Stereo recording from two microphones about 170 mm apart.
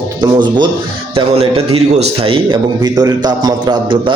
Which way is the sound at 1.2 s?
35° right (ahead or behind).